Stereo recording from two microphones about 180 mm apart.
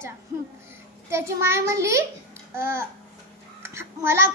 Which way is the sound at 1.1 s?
15° right (ahead or behind).